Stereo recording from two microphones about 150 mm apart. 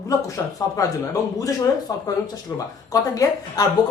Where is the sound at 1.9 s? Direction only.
25° left (ahead or behind).